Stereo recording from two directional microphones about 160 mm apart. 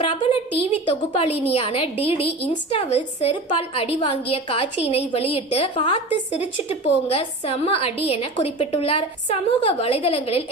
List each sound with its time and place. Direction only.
0.0 s a woman's voice: 30° left (ahead or behind)